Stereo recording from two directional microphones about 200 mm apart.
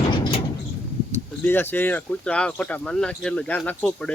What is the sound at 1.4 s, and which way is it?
Speech, 10° left (ahead or behind).